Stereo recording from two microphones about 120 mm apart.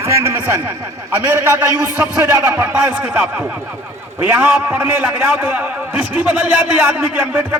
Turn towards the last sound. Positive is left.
turn(degrees=-20)  # may be behind; listen again after turning